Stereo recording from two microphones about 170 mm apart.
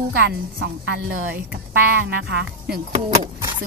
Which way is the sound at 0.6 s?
90° right.